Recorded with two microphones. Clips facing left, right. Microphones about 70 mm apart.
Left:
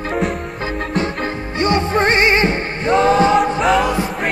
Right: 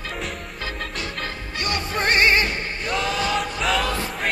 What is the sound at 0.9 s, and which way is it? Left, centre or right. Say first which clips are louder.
Music: left 10 dB; left.